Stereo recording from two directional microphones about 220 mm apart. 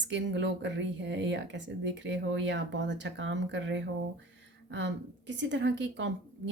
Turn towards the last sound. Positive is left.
turn(degrees=-55)  # may be behind; listen again after turning